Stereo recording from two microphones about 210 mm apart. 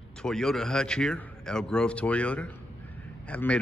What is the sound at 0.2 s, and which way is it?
Speech, 5° left (ahead or behind).